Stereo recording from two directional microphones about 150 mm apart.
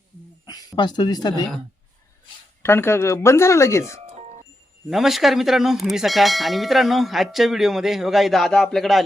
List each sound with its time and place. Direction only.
0.4 s speech: 25° left (ahead or behind)
2.6 s speech: 15° left (ahead or behind)
4.9 s speech: centre (ahead or behind)